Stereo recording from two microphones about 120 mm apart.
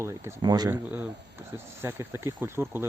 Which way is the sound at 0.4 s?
35° right (ahead or behind).